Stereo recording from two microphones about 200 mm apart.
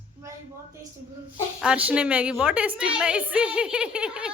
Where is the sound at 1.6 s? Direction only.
5° right (ahead or behind).